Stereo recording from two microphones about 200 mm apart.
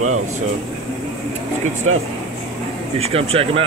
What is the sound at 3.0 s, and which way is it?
Speech, 30° right (ahead or behind).